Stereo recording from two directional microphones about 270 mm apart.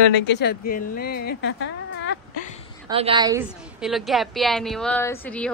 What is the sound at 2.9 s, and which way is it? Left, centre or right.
Speech, centre.